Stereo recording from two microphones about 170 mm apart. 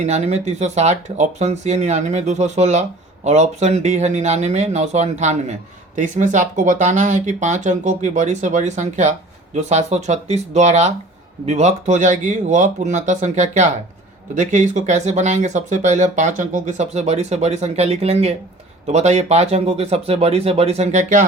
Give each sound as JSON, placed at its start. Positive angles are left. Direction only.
{"t": 0.0, "sound": "speech", "side_deg": -40}